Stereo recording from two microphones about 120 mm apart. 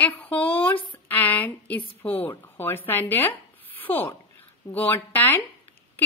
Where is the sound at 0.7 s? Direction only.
45° left (ahead or behind).